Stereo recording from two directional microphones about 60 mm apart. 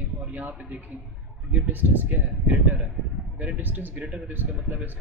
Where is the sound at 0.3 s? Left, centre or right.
Right.